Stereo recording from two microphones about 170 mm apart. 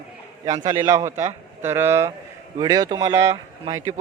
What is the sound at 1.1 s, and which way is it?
Speech, 40° right (ahead or behind).